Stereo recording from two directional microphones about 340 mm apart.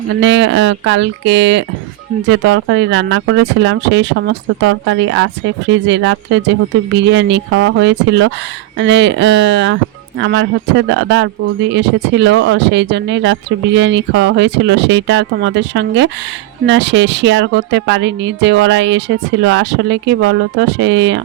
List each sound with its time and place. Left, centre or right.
0.2 s a woman's voice: right